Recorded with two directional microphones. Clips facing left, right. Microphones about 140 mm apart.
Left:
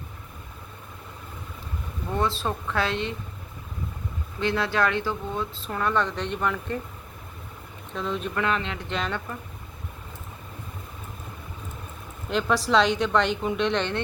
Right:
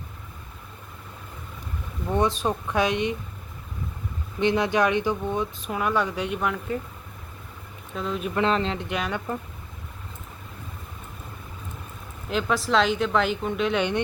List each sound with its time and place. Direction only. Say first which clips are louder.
2.0 s speech: right 3 dB; 15° right (ahead or behind)
4.4 s speech: right 3 dB; 20° right (ahead or behind)
7.9 s a woman's voice: even; 5° right (ahead or behind)
8.4 s speech: right 6 dB; 30° right (ahead or behind)
8.9 s speech: right 1 dB; 10° right (ahead or behind)
12.3 s a woman's voice: left 1 dB; centre (ahead or behind)